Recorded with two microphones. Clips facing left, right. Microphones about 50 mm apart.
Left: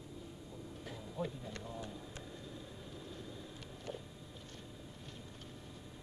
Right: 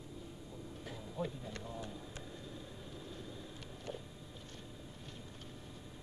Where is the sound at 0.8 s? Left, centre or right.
Right.